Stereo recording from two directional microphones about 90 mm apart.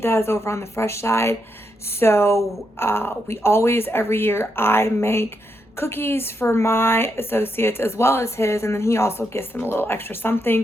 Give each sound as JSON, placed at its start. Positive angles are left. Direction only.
{"t": 0.0, "sound": "a woman's voice", "side_deg": 25}